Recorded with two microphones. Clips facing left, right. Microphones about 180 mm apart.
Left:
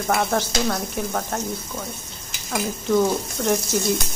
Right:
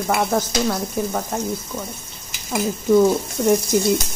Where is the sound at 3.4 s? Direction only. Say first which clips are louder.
Right 5 dB; 10° right (ahead or behind).